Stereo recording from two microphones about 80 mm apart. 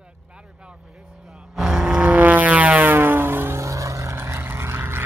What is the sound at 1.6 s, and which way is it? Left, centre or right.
Music, centre.